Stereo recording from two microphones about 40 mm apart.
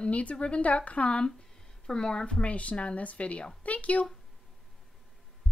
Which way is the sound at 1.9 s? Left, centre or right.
Centre.